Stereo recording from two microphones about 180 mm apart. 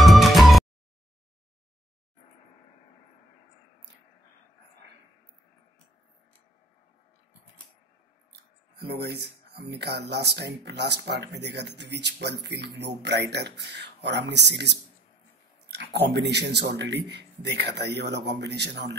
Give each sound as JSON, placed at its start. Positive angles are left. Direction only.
{"t": 0.0, "sound": "music", "side_deg": 0}
{"t": 8.7, "sound": "speech", "side_deg": -60}